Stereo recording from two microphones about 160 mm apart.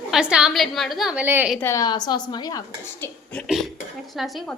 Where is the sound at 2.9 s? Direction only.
10° left (ahead or behind).